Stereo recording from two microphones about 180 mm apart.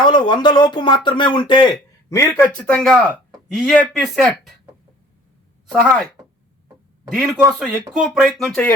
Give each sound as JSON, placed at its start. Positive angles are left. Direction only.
{"t": 0.0, "sound": "speech", "side_deg": 25}
{"t": 2.6, "sound": "speech", "side_deg": 5}
{"t": 5.7, "sound": "speech", "side_deg": 0}
{"t": 7.1, "sound": "speech", "side_deg": -5}